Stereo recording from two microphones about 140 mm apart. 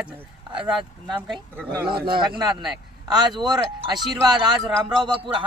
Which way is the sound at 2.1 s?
35° right (ahead or behind).